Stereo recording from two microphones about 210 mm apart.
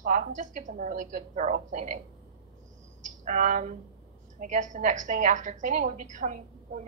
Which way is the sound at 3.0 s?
35° right (ahead or behind).